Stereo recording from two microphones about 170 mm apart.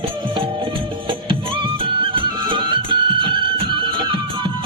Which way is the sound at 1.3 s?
30° right (ahead or behind).